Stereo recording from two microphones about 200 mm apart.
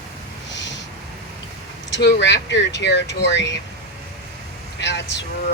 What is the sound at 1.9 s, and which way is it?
Speech, 60° left (ahead or behind).